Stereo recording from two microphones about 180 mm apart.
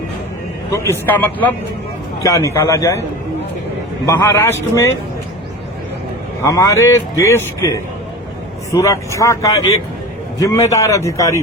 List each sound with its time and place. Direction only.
0.7 s a man's voice: 15° left (ahead or behind)
4.0 s a man's voice: 15° left (ahead or behind)
6.4 s a man's voice: 15° left (ahead or behind)